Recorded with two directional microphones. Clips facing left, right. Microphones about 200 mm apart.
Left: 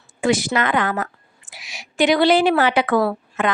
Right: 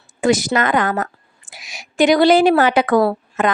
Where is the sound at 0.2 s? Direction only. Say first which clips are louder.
Right 3 dB; 45° right (ahead or behind).